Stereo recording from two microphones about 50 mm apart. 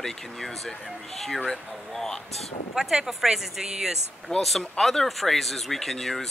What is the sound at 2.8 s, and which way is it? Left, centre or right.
Speech, centre.